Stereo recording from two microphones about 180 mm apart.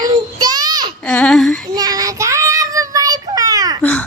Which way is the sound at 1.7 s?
20° right (ahead or behind).